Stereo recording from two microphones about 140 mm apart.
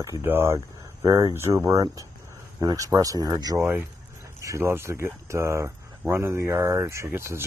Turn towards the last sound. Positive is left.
turn(degrees=-15)  # may be behind; listen again after turning